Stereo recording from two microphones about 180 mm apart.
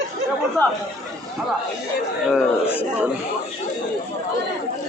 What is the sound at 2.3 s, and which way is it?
Speech, 10° left (ahead or behind).